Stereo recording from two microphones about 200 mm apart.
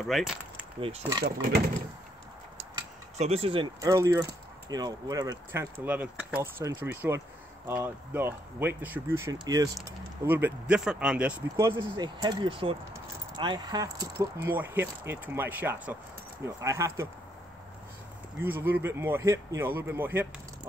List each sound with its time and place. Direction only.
0.0 s speech: centre (ahead or behind)
0.7 s speech: 25° right (ahead or behind)
3.2 s speech: 30° right (ahead or behind)
3.8 s speech: 15° right (ahead or behind)
18.4 s speech: 10° right (ahead or behind)